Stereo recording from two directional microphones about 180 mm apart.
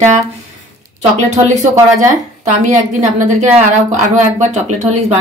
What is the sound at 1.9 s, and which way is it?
Speech, 45° right (ahead or behind).